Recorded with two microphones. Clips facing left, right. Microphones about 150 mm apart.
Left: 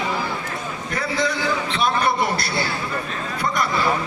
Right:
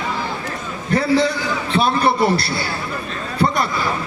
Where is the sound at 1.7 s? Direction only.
30° right (ahead or behind).